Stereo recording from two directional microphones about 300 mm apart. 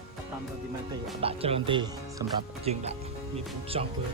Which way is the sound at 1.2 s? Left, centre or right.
Centre.